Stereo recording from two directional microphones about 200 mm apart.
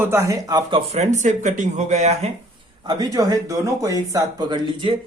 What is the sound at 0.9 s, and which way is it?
Speech, 35° right (ahead or behind).